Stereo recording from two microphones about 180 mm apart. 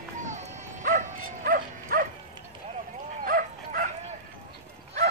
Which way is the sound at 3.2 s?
50° right (ahead or behind).